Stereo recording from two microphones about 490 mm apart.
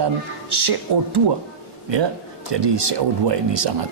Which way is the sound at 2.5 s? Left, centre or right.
Right.